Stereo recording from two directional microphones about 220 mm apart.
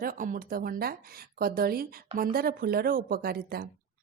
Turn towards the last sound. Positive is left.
turn(degrees=-45)  # may be behind; listen again after turning